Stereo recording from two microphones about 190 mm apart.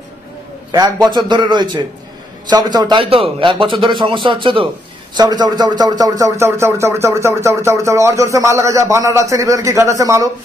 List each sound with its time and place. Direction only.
0.7 s a man's voice: 20° right (ahead or behind)